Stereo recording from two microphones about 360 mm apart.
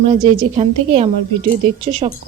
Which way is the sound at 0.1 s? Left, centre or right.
Centre.